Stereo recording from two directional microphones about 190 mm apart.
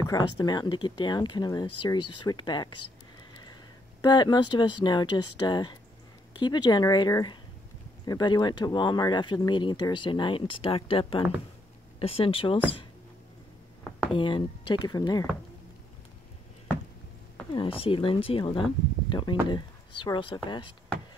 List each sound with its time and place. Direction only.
0.0 s speech: 20° left (ahead or behind)
4.0 s speech: 20° left (ahead or behind)
14.1 s speech: 25° left (ahead or behind)
17.6 s speech: 30° left (ahead or behind)
19.0 s a sound: 25° left (ahead or behind)
19.5 s speech: 25° left (ahead or behind)